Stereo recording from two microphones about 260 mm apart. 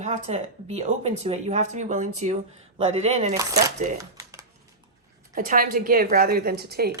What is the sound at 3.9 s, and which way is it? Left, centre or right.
Crumpling, centre.